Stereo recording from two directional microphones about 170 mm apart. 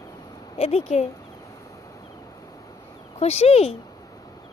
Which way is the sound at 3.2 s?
40° left (ahead or behind).